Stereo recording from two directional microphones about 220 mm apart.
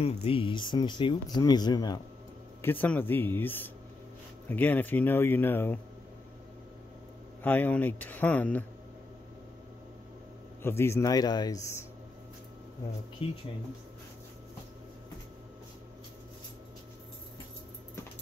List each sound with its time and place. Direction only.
0.0 s speech: 25° left (ahead or behind); by 5.8 s 10° left (ahead or behind)
7.4 s speech: 5° left (ahead or behind)
10.6 s speech: 10° left (ahead or behind)
13.2 s speech: 25° left (ahead or behind)